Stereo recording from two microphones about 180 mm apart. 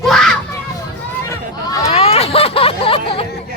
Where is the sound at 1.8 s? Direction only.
35° left (ahead or behind).